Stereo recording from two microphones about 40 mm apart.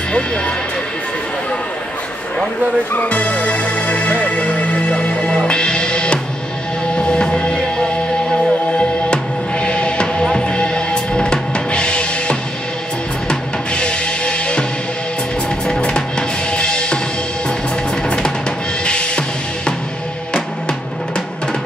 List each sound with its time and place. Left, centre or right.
2.9 s music: left
15.8 s drum: left
18.9 s music: left